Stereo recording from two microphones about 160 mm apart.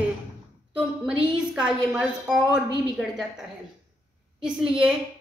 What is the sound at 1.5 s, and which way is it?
A woman's voice, 5° right (ahead or behind).